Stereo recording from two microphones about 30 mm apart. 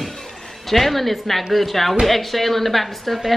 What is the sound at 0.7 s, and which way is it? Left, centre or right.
A woman's voice, centre.